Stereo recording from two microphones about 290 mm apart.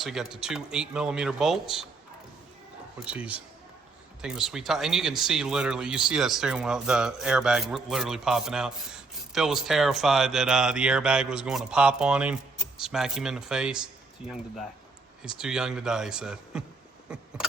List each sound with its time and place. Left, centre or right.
0.0 s speech: centre
3.0 s speech: centre
15.2 s speech: centre